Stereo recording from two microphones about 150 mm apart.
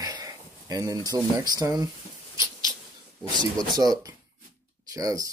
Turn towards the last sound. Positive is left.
turn(degrees=-25)  # may be behind; listen again after turning